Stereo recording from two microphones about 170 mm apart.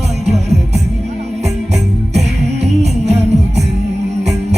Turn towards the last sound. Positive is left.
turn(degrees=-40)  # may be behind; listen again after turning